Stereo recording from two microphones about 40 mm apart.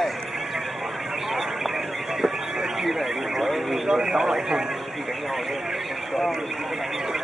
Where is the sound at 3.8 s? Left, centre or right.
Centre.